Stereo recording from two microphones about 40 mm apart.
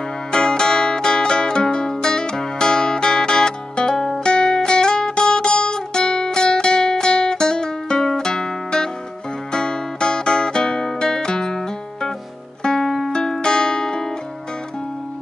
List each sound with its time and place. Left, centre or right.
0.3 s zither: centre
4.2 s music: left; by 13.1 s centre
13.1 s music: centre